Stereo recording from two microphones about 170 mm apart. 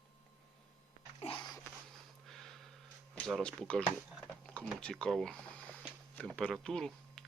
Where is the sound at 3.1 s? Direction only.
5° left (ahead or behind).